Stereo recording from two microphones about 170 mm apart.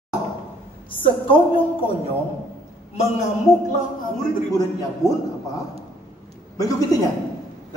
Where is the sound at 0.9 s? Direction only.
30° left (ahead or behind).